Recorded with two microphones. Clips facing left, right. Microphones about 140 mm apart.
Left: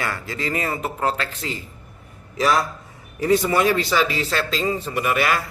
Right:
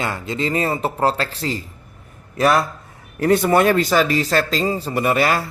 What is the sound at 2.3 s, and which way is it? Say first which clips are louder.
A man's voice: right 3 dB; 55° right (ahead or behind).